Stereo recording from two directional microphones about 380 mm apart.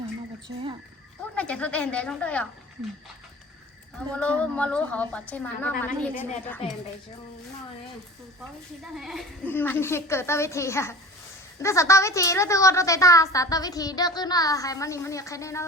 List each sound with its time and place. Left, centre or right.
1.4 s a woman's voice: centre
4.1 s a woman's voice: centre
8.8 s a woman's voice: centre